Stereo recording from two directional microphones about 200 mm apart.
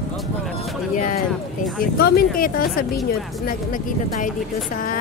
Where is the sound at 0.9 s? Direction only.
40° left (ahead or behind).